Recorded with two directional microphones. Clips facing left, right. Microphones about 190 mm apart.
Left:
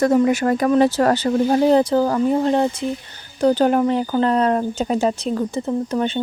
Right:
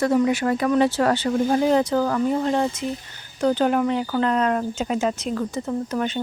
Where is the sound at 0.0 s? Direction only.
45° left (ahead or behind).